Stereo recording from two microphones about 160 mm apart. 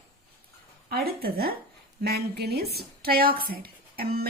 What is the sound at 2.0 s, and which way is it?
A woman's voice, 85° right.